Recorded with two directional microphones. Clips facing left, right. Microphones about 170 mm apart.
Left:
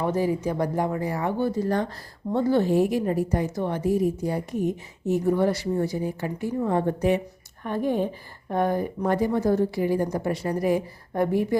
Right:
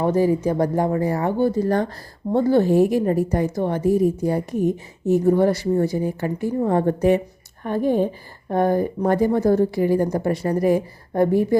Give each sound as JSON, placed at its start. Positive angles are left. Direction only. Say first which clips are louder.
{"t": 0.0, "sound": "a woman's voice", "louder": "right 6 dB", "side_deg": -40}